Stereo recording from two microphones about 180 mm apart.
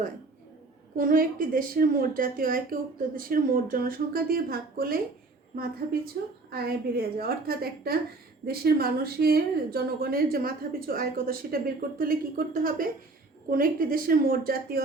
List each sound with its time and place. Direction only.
0.9 s a woman's voice: 50° right (ahead or behind)